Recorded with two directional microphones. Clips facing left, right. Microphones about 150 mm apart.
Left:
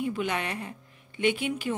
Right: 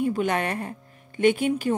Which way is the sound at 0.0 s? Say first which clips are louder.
Right 5 dB; 45° right (ahead or behind).